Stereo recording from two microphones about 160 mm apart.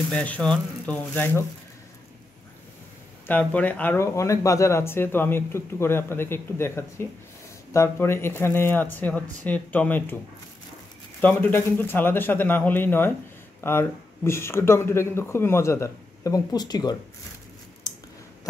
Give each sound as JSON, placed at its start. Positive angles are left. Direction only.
{"t": 0.1, "sound": "speech", "side_deg": 10}
{"t": 3.3, "sound": "speech", "side_deg": 10}